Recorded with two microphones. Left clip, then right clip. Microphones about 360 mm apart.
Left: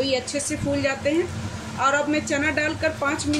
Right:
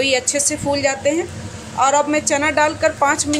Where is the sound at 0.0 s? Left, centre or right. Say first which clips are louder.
Right 7 dB; centre.